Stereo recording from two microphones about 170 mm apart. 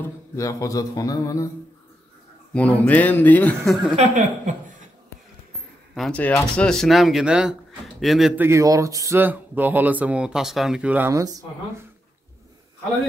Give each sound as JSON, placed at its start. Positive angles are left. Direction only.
{"t": 0.0, "sound": "music", "side_deg": 20}
{"t": 2.5, "sound": "a man's voice", "side_deg": 10}
{"t": 3.9, "sound": "speech", "side_deg": -45}
{"t": 5.9, "sound": "speech", "side_deg": 5}
{"t": 8.5, "sound": "speech", "side_deg": -20}